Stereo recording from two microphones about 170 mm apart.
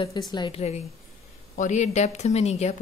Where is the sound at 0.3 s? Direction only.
25° left (ahead or behind).